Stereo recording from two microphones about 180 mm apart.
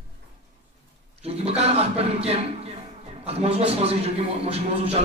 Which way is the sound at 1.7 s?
35° right (ahead or behind).